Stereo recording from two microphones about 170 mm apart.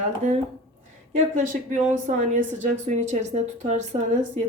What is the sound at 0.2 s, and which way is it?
Speech, 45° right (ahead or behind).